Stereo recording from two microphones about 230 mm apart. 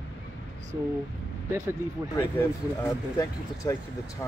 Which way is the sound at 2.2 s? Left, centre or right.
Centre.